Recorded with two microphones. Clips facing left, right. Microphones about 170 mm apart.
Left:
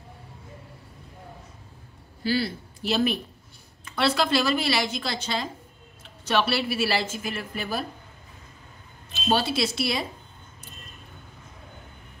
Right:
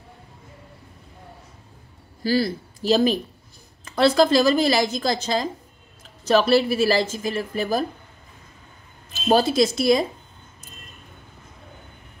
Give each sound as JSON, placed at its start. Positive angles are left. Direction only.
{"t": 2.2, "sound": "a woman's voice", "side_deg": -40}
{"t": 9.1, "sound": "speech", "side_deg": -40}